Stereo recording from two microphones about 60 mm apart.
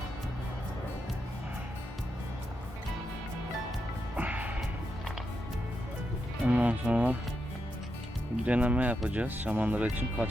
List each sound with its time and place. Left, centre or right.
4.2 s music: right
6.4 s speech: right
8.4 s speech: right